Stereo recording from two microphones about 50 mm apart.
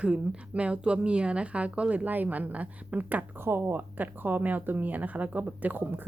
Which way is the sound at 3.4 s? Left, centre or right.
Right.